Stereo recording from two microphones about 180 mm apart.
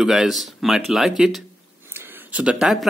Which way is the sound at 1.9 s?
10° right (ahead or behind).